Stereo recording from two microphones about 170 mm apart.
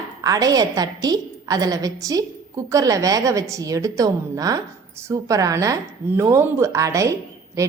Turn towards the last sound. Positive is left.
turn(degrees=-15)  # may be behind; listen again after turning